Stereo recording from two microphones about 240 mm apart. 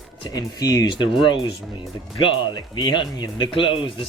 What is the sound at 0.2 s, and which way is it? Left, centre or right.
Speech, centre.